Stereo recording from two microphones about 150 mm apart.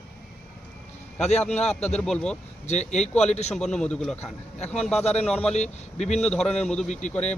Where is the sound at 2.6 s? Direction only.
50° left (ahead or behind).